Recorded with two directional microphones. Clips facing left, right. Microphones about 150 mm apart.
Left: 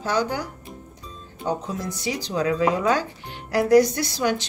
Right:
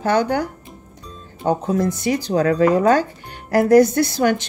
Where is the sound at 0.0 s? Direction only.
60° right (ahead or behind).